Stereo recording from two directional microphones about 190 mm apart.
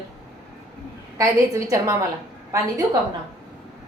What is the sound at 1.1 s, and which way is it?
Speech, 15° right (ahead or behind).